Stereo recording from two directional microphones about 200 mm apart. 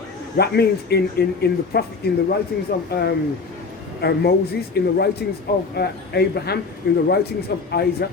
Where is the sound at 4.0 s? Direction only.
55° left (ahead or behind).